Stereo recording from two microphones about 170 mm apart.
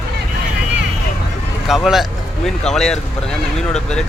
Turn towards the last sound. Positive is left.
turn(degrees=5)  # may be behind; listen again after turning